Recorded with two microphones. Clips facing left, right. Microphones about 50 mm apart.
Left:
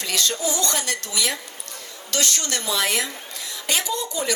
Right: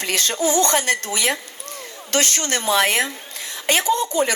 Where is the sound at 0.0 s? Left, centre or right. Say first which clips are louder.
Right 3 dB; right.